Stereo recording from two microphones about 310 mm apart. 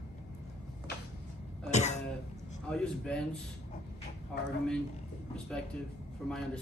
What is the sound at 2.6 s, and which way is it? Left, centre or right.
Speech, centre.